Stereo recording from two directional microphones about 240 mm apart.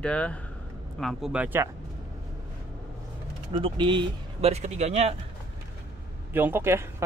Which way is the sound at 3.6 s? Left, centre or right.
Centre.